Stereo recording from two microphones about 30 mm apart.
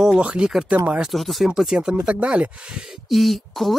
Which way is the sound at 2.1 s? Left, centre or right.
Right.